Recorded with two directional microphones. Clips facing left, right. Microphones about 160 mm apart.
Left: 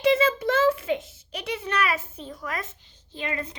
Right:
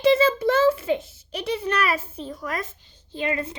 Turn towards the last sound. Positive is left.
turn(degrees=-30)  # may be behind; listen again after turning